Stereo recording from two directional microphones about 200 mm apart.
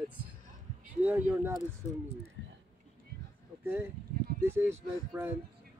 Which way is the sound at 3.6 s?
10° right (ahead or behind).